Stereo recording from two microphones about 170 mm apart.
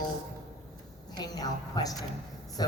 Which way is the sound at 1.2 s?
20° left (ahead or behind).